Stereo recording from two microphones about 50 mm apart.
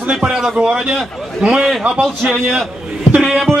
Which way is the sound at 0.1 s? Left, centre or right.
Centre.